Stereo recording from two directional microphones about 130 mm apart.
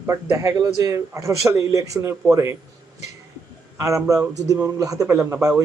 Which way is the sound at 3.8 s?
25° right (ahead or behind).